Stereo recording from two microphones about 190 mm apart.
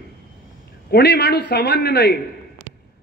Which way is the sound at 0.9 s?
60° left (ahead or behind).